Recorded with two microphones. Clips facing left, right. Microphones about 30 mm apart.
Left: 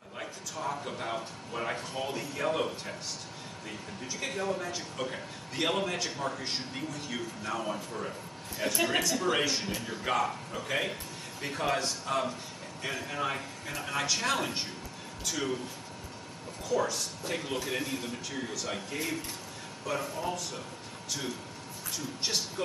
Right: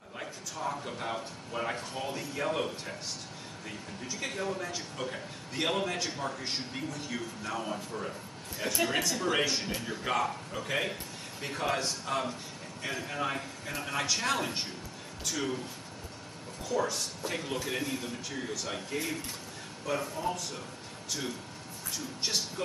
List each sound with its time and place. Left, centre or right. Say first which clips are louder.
0.2 s a man's voice: even; centre
4.0 s a man's voice: left 1 dB; centre
16.6 s a man's voice: left 1 dB; centre
21.9 s a man's voice: even; centre